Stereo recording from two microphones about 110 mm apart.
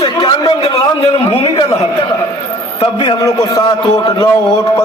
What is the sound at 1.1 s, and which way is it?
Speech, 70° left (ahead or behind).